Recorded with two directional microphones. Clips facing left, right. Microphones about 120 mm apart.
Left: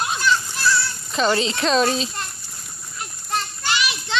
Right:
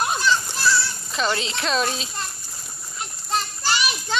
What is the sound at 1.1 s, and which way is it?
Speech, centre (ahead or behind).